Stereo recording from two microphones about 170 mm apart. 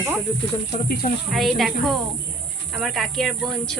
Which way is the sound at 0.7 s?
55° left (ahead or behind).